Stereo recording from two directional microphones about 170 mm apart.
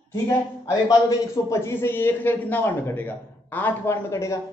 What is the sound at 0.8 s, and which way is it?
A man's voice, 20° left (ahead or behind).